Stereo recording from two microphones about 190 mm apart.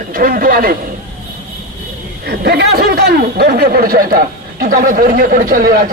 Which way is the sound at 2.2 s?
55° right (ahead or behind).